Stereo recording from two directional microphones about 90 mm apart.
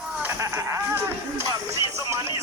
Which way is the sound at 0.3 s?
35° right (ahead or behind).